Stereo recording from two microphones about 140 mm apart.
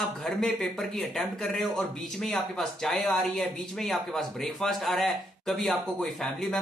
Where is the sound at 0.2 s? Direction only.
Centre (ahead or behind).